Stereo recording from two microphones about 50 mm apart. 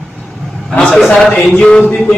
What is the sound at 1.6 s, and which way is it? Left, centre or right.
Speech, centre.